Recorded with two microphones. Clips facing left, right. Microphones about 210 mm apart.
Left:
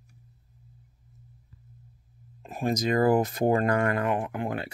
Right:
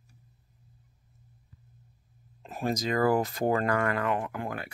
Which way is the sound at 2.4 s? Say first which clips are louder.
Left 3 dB; 15° left (ahead or behind).